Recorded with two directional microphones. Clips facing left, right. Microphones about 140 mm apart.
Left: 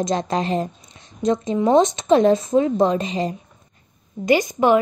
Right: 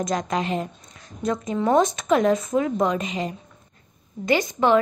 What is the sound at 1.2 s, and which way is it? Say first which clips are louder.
Speech: left 5 dB; 20° left (ahead or behind).